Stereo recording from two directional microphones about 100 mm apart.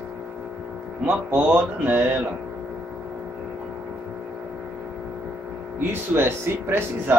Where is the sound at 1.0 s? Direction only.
15° right (ahead or behind).